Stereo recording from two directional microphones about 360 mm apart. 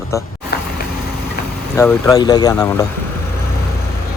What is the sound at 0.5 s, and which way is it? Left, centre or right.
Vehicle, left.